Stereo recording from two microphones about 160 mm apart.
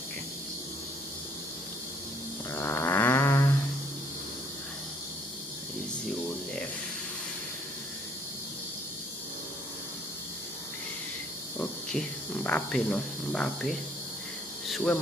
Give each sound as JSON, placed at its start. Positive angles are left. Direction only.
{"t": 2.5, "sound": "snoring", "side_deg": 15}
{"t": 11.5, "sound": "hum", "side_deg": 10}
{"t": 12.4, "sound": "speech", "side_deg": 5}
{"t": 14.7, "sound": "insect", "side_deg": 0}